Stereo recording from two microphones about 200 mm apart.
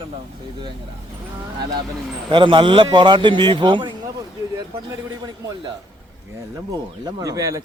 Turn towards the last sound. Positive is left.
turn(degrees=-15)  # may be behind; listen again after turning